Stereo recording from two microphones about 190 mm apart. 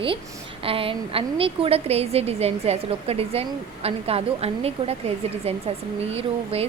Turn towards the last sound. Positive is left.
turn(degrees=-30)  # may be behind; listen again after turning